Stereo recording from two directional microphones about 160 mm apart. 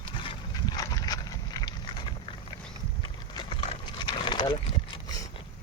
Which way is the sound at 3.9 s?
30° left (ahead or behind).